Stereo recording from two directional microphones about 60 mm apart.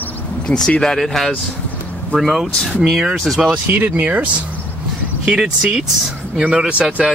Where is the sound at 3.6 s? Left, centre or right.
Right; by 6.8 s centre.